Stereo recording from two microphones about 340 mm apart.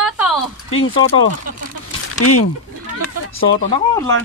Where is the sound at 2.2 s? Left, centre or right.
Left.